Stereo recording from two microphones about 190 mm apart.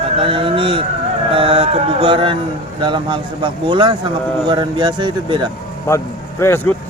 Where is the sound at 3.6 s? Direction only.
25° right (ahead or behind).